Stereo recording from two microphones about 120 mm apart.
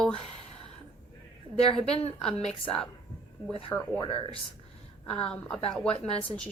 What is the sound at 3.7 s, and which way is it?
Speech, 20° left (ahead or behind).